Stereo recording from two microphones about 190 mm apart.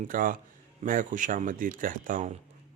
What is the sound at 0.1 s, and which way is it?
Speech, 45° right (ahead or behind).